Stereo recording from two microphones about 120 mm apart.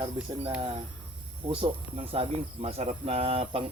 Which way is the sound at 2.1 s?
50° right (ahead or behind).